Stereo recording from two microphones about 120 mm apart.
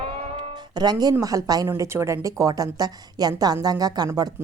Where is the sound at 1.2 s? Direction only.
30° right (ahead or behind).